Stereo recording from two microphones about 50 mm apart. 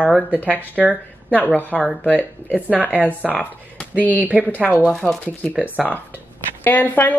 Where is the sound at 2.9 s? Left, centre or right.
Right.